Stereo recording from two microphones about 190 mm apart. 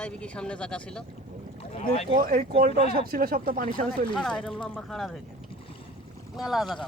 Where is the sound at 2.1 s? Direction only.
50° right (ahead or behind).